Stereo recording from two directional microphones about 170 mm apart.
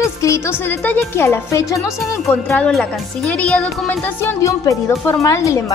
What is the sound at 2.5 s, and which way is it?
Speech, centre (ahead or behind).